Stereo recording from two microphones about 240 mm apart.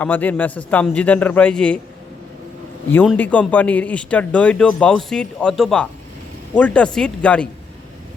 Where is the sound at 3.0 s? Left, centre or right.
Centre.